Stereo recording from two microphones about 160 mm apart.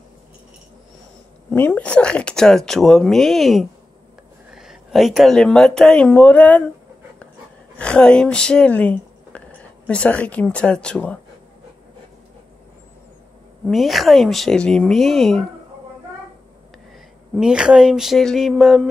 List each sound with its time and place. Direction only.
1.5 s speech: 10° left (ahead or behind)
7.7 s speech: 5° left (ahead or behind)
13.7 s speech: centre (ahead or behind)
17.4 s speech: 5° right (ahead or behind)